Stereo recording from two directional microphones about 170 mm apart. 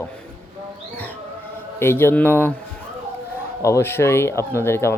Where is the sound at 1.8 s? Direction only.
15° left (ahead or behind).